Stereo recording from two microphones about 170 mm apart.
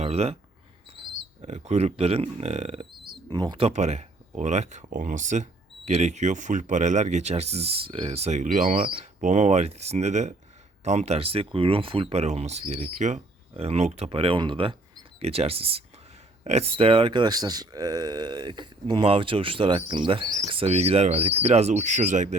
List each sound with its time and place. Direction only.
0.0 s speech: 40° right (ahead or behind)
1.0 s a sound: 30° right (ahead or behind)
1.5 s speech: 40° right (ahead or behind)
3.2 s speech: 25° right (ahead or behind)
3.7 s speech: 40° right (ahead or behind)